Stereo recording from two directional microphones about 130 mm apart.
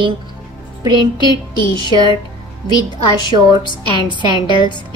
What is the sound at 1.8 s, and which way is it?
Speech, 35° left (ahead or behind).